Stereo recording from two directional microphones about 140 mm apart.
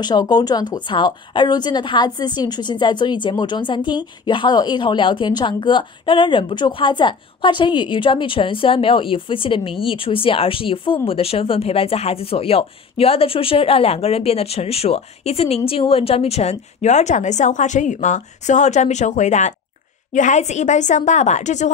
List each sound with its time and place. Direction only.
0.0 s a woman's voice: 30° left (ahead or behind); by 21.7 s 60° left (ahead or behind)